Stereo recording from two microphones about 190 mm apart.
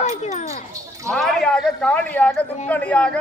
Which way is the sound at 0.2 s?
35° left (ahead or behind).